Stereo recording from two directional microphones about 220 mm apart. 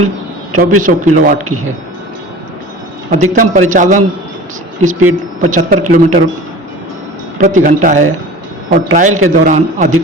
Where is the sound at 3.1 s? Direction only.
35° right (ahead or behind).